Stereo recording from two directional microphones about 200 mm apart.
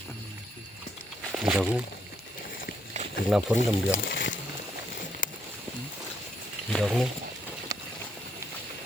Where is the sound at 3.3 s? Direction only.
Centre (ahead or behind).